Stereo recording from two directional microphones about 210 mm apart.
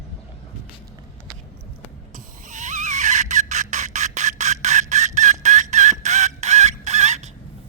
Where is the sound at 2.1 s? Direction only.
40° right (ahead or behind).